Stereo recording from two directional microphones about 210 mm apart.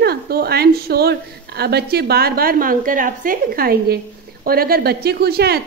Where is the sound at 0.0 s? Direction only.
50° right (ahead or behind).